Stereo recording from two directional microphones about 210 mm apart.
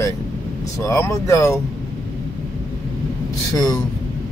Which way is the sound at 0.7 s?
15° left (ahead or behind).